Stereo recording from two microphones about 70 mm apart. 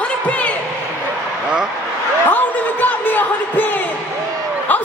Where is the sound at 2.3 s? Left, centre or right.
Left.